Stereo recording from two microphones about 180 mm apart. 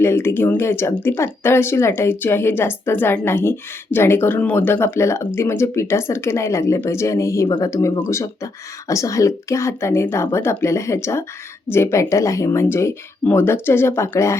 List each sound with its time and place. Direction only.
0.0 s speech: 15° left (ahead or behind)